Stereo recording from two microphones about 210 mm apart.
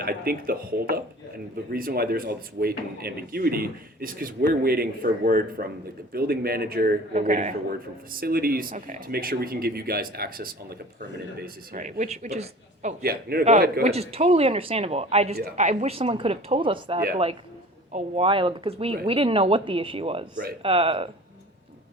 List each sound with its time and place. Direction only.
0.0 s speech: 45° right (ahead or behind)
7.1 s speech: 35° right (ahead or behind)
13.0 s speech: 45° right (ahead or behind); by 15.4 s 30° right (ahead or behind)
15.4 s speech: 40° right (ahead or behind)